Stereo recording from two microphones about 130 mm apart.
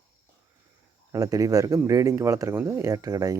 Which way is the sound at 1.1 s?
25° right (ahead or behind).